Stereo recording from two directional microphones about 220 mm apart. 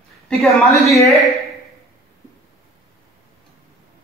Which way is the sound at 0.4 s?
Centre (ahead or behind).